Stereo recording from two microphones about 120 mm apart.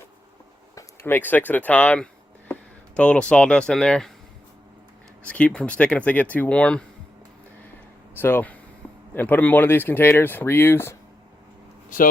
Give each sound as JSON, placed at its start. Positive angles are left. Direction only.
{"t": 0.8, "sound": "speech", "side_deg": 15}
{"t": 5.2, "sound": "speech", "side_deg": 10}
{"t": 8.1, "sound": "speech", "side_deg": 20}
{"t": 11.9, "sound": "speech", "side_deg": 90}